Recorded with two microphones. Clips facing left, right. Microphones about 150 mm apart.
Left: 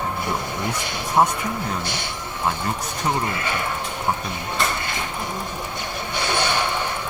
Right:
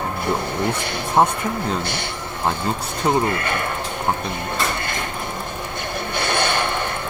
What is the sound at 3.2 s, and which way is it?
Speech, 55° right (ahead or behind).